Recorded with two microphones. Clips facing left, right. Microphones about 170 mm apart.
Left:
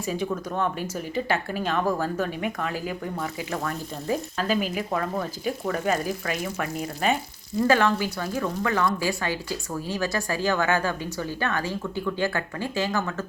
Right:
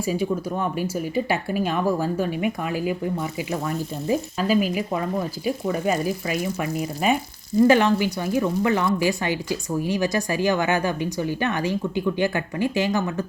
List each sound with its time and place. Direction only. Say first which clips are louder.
0.0 s a woman's voice: right 4 dB; 10° right (ahead or behind)